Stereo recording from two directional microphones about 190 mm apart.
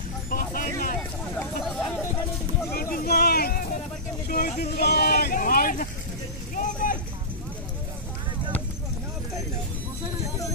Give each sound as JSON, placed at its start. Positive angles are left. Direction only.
{"t": 0.3, "sound": "vehicle", "side_deg": 45}
{"t": 2.7, "sound": "a sound", "side_deg": 50}
{"t": 6.5, "sound": "vehicle", "side_deg": 45}